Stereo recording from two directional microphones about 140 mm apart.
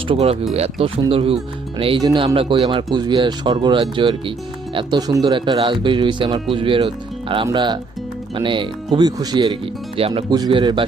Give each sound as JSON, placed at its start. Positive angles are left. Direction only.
{"t": 0.1, "sound": "speech", "side_deg": -45}
{"t": 2.0, "sound": "speech", "side_deg": -30}
{"t": 2.2, "sound": "speech", "side_deg": -40}